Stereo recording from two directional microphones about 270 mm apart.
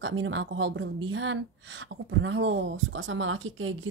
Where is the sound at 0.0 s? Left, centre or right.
Right.